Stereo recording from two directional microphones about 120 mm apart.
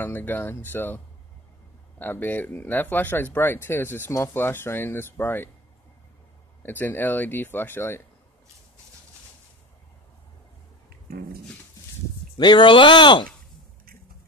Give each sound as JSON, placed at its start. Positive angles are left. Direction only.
{"t": 0.0, "sound": "speech", "side_deg": 15}
{"t": 6.6, "sound": "speech", "side_deg": 15}
{"t": 12.4, "sound": "speech", "side_deg": 40}